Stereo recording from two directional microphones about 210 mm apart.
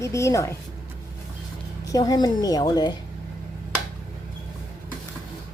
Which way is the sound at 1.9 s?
20° left (ahead or behind).